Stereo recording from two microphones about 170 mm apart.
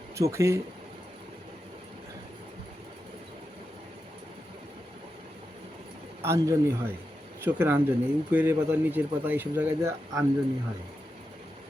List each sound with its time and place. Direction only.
0.2 s speech: 15° right (ahead or behind)
6.2 s speech: 15° right (ahead or behind)